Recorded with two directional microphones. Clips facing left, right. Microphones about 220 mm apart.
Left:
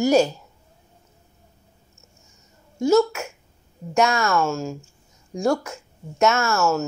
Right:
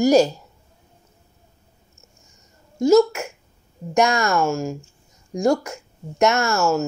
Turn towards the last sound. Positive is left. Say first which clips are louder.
# right 1 dB
turn(degrees=-15)  # may be behind; listen again after turning